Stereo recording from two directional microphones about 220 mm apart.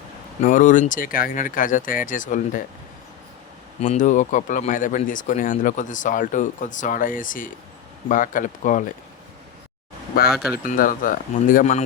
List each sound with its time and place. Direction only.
0.4 s speech: 35° left (ahead or behind)
3.8 s speech: 35° left (ahead or behind)
10.3 s speech: centre (ahead or behind)
10.6 s speech: 40° left (ahead or behind)